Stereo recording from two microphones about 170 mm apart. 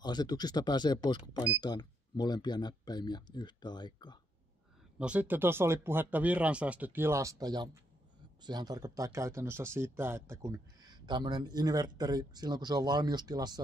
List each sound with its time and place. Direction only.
0.0 s speech: 25° left (ahead or behind)
4.9 s speech: 5° right (ahead or behind); by 13.6 s 25° right (ahead or behind)